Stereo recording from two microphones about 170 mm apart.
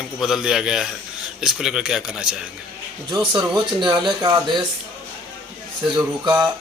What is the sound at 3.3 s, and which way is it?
Speech, 25° right (ahead or behind).